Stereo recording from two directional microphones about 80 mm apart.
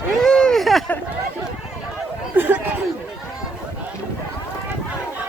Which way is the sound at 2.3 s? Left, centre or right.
Right.